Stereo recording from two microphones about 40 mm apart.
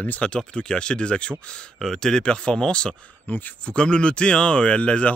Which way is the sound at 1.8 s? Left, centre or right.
Centre.